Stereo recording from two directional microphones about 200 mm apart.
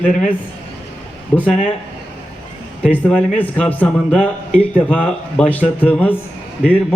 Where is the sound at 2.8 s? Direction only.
5° left (ahead or behind).